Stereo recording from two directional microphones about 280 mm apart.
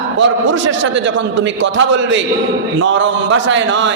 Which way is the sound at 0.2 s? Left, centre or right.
Right.